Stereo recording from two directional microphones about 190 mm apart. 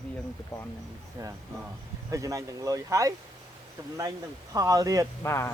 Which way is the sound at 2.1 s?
15° right (ahead or behind).